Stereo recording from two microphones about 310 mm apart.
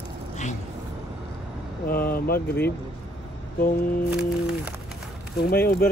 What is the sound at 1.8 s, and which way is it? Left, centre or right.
Speech, left.